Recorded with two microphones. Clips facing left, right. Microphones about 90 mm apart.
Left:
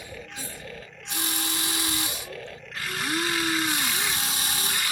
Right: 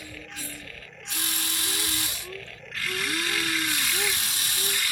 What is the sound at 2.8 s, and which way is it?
Chainsaw, 25° left (ahead or behind).